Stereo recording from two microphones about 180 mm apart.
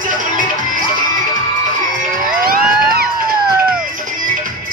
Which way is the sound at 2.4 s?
55° right (ahead or behind).